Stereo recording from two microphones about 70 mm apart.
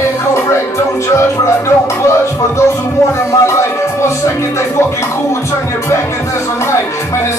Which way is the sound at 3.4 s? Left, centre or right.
Left.